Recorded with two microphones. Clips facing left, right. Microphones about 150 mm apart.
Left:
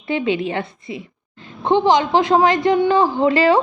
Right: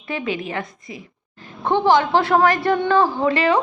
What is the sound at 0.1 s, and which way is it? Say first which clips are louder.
A woman's voice: left 5 dB; 25° left (ahead or behind).